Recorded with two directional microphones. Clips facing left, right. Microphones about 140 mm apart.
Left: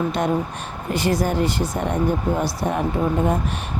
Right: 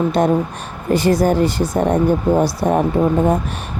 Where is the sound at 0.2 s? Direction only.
35° right (ahead or behind).